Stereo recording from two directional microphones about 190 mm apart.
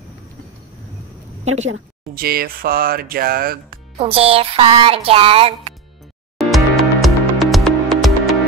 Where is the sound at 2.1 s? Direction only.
50° right (ahead or behind).